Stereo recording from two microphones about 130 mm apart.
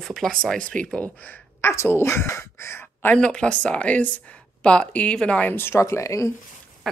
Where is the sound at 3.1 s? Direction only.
5° left (ahead or behind); by 6.3 s 25° left (ahead or behind).